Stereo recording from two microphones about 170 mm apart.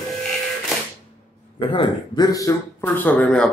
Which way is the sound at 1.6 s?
30° left (ahead or behind).